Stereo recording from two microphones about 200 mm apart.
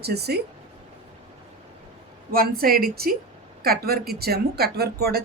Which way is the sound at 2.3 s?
50° right (ahead or behind).